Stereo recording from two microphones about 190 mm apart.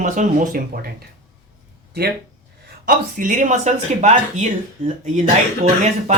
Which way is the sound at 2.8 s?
45° right (ahead or behind).